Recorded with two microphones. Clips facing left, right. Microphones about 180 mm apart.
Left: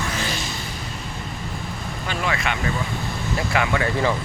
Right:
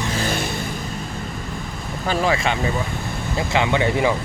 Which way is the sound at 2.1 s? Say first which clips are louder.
Right 6 dB; 30° right (ahead or behind).